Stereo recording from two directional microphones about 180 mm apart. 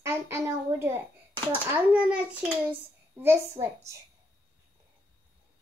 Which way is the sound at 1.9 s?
10° right (ahead or behind).